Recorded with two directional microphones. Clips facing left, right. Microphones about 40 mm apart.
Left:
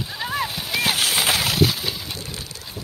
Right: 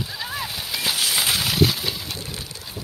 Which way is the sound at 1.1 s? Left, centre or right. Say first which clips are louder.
Left 2 dB; centre.